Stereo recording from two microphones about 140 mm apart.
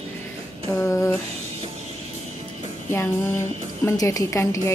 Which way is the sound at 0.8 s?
15° left (ahead or behind).